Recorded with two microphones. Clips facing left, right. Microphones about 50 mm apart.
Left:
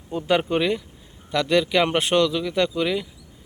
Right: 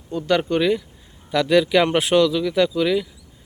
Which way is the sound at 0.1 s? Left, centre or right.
Left.